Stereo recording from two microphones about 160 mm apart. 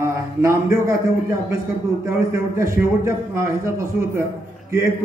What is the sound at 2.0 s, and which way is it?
A man's voice, 15° right (ahead or behind).